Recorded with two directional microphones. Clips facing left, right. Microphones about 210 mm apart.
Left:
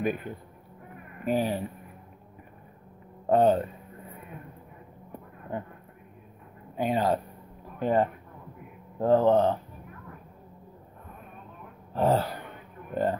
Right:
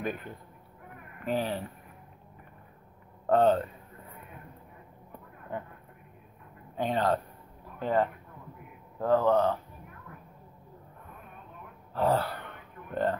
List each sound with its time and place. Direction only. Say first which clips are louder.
0.0 s speech: left 5 dB; 10° left (ahead or behind)
3.3 s speech: left 2 dB; 15° left (ahead or behind)
6.8 s speech: left 2 dB; 10° left (ahead or behind)
11.9 s a sound: left 2 dB; 20° left (ahead or behind)